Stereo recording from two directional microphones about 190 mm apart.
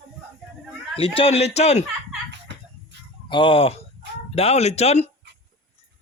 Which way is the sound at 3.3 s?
25° left (ahead or behind).